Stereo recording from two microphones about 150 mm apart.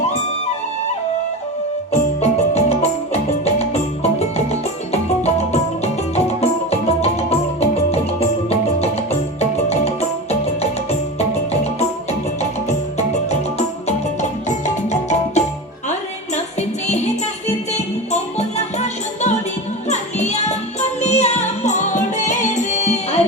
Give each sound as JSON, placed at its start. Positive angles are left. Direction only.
{"t": 1.9, "sound": "music", "side_deg": 45}
{"t": 11.2, "sound": "music", "side_deg": 45}